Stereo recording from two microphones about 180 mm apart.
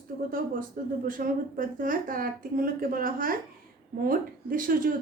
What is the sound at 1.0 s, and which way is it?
A woman's voice, 50° right (ahead or behind).